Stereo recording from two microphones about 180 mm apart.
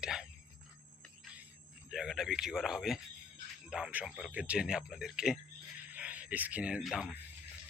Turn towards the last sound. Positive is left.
turn(degrees=-5)  # may be behind; listen again after turning